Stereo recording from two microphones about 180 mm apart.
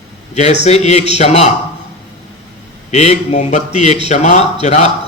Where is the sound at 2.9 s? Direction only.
35° left (ahead or behind).